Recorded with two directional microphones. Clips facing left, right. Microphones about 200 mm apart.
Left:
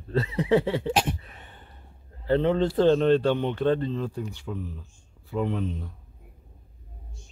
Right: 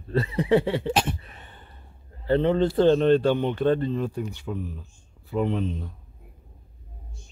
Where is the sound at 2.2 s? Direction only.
Centre (ahead or behind); by 5.7 s 20° right (ahead or behind).